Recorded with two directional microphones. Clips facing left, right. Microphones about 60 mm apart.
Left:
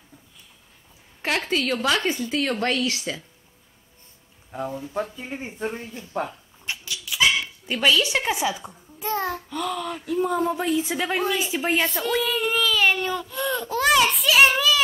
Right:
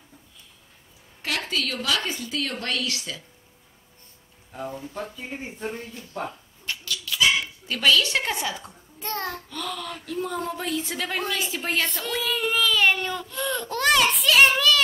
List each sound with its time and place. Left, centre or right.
1.2 s a woman's voice: left
4.6 s speech: centre
5.4 s speech: left
6.6 s dog: centre
7.2 s speech: centre